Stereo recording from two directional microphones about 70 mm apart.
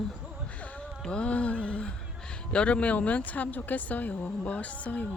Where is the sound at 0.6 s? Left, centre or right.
Centre.